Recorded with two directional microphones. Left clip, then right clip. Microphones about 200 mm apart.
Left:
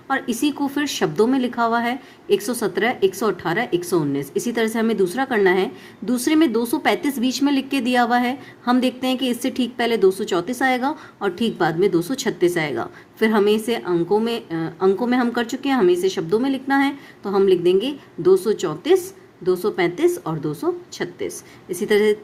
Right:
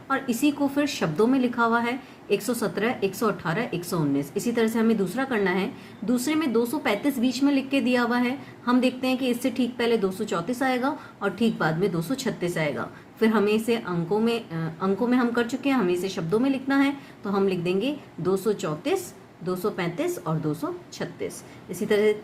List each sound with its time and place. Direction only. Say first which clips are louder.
0.1 s a woman's voice: left 3 dB; 40° left (ahead or behind)